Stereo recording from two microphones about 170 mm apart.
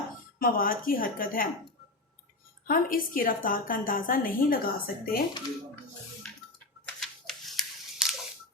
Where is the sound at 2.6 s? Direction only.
55° left (ahead or behind).